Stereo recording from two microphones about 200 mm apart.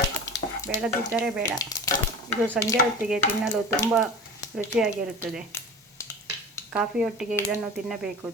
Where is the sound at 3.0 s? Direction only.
5° right (ahead or behind).